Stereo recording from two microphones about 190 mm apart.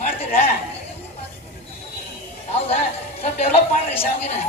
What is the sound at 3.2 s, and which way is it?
Speech, 30° left (ahead or behind).